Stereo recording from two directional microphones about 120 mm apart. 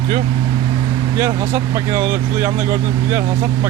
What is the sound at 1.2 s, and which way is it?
Speech, 20° right (ahead or behind).